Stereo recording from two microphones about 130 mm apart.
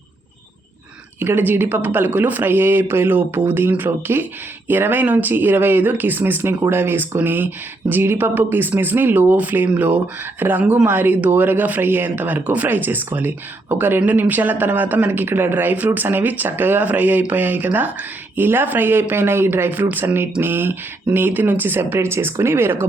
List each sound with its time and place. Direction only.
1.2 s speech: 15° right (ahead or behind)